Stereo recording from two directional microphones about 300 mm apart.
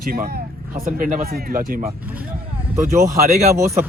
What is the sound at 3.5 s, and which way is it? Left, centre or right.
Speech, centre.